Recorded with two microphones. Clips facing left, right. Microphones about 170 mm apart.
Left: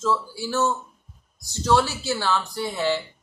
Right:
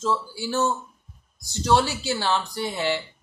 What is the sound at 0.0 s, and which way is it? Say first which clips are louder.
Speech: left 1 dB; 15° right (ahead or behind).